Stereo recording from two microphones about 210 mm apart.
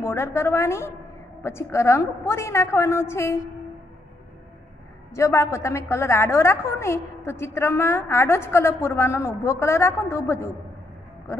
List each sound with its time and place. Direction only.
0.0 s a woman's voice: 10° left (ahead or behind)
5.1 s a woman's voice: 15° left (ahead or behind)